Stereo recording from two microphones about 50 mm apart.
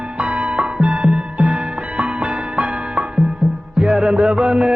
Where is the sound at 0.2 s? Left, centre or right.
Right.